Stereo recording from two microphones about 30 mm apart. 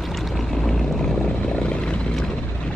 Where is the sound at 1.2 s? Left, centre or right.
Left.